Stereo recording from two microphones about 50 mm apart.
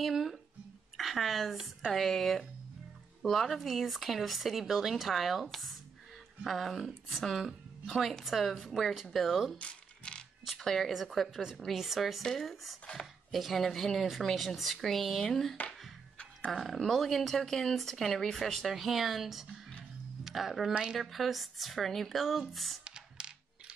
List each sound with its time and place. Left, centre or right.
0.0 s a woman's voice: centre
9.6 s a sound: left
10.6 s speech: centre
16.5 s speech: centre
20.7 s a woman's voice: centre
21.0 s speech: centre
22.8 s typing: centre